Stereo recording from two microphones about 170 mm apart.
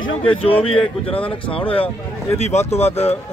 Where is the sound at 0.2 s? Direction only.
35° left (ahead or behind).